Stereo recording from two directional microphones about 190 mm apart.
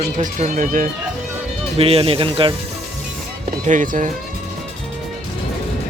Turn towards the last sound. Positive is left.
turn(degrees=-45)  # may be behind; listen again after turning